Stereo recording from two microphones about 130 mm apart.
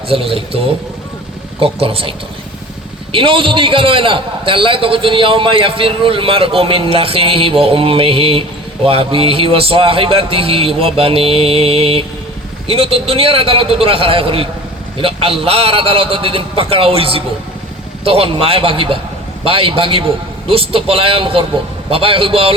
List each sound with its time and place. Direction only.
0.1 s a man's voice: 45° right (ahead or behind)